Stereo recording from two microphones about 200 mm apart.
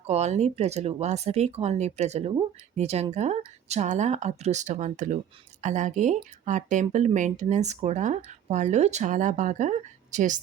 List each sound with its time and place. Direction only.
0.0 s speech: 35° right (ahead or behind)